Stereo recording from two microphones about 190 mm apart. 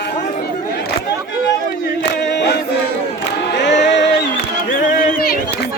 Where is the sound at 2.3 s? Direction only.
65° left (ahead or behind).